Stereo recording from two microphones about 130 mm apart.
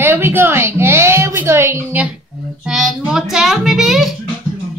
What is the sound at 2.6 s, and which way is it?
A child's voice, 5° right (ahead or behind).